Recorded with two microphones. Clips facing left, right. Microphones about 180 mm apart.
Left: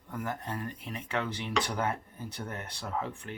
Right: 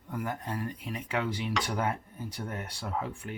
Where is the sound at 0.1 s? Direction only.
10° right (ahead or behind).